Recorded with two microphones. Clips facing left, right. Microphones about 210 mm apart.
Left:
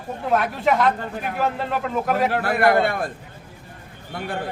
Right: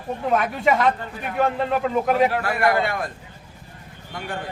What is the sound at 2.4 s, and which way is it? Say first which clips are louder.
Speech: left 3 dB; 55° left (ahead or behind).